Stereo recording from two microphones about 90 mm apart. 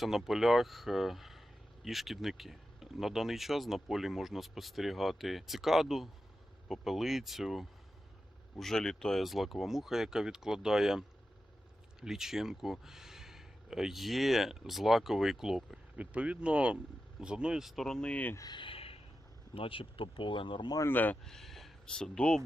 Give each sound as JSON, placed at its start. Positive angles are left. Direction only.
{"t": 0.0, "sound": "speech", "side_deg": 0}
{"t": 16.0, "sound": "speech", "side_deg": -15}
{"t": 18.5, "sound": "a sound", "side_deg": 80}
{"t": 19.5, "sound": "speech", "side_deg": 90}
{"t": 20.8, "sound": "speech", "side_deg": 20}
{"t": 21.2, "sound": "speech", "side_deg": 5}